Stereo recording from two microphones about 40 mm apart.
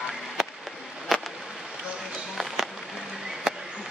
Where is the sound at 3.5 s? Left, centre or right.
Centre.